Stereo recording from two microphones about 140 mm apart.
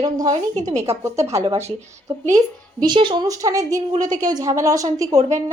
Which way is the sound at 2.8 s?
35° right (ahead or behind).